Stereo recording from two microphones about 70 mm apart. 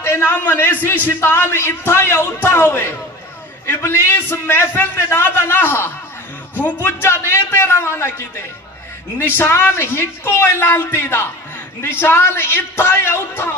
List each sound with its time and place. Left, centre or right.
0.0 s a man's voice: left